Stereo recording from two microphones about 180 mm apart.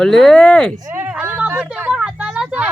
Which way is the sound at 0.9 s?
10° right (ahead or behind).